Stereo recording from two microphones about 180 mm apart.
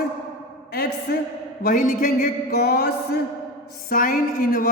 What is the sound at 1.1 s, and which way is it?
A man's voice, 60° left (ahead or behind).